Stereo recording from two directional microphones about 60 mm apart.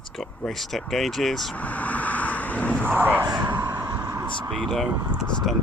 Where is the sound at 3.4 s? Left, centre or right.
Right.